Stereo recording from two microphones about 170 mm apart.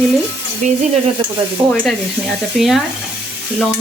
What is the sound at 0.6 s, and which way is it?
Stir, 45° right (ahead or behind).